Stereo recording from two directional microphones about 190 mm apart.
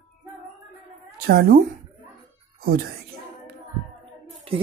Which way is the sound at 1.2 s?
50° right (ahead or behind).